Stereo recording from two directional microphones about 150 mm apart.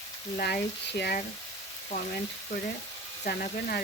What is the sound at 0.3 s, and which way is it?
Speech, 90° left.